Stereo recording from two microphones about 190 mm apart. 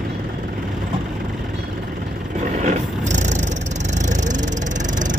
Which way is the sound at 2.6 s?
40° right (ahead or behind).